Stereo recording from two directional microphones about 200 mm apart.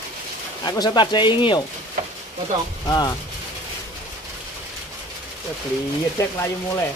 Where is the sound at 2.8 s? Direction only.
15° left (ahead or behind).